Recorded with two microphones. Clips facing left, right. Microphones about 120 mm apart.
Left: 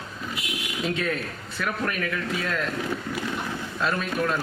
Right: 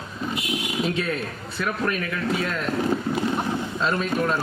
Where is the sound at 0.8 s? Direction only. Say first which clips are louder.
Even; 30° right (ahead or behind).